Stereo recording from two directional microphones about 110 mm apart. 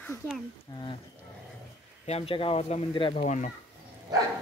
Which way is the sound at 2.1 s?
65° left (ahead or behind).